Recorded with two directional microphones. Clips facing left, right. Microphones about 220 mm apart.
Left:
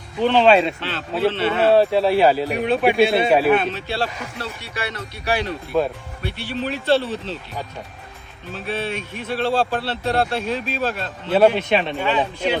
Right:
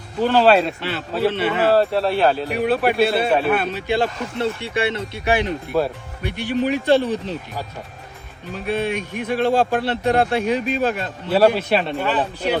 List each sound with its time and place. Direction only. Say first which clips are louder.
0.2 s speech: even; 5° right (ahead or behind)
1.5 s speech: left 4 dB; centre (ahead or behind)
8.5 s speech: right 4 dB; 15° right (ahead or behind)
11.3 s speech: even; 5° right (ahead or behind)